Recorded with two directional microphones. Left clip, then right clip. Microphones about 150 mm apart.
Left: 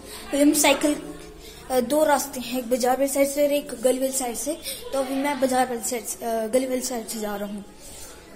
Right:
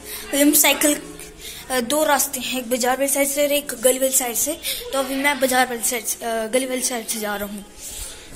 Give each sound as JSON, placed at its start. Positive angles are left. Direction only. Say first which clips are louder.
{"t": 0.3, "sound": "a woman's voice", "louder": "right 2 dB", "side_deg": 0}
{"t": 1.7, "sound": "a woman's voice", "louder": "right 1 dB", "side_deg": 20}
{"t": 3.6, "sound": "a woman's voice", "louder": "right 4 dB", "side_deg": 0}